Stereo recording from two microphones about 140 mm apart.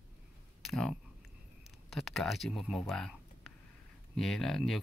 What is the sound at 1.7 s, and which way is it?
Speech, centre (ahead or behind).